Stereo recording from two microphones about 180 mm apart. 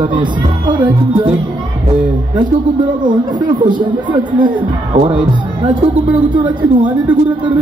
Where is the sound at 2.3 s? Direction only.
25° right (ahead or behind).